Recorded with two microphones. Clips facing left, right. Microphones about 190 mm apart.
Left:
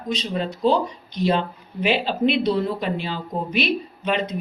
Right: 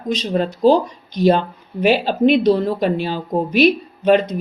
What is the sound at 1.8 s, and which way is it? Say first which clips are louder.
Speech: right 6 dB; 45° right (ahead or behind).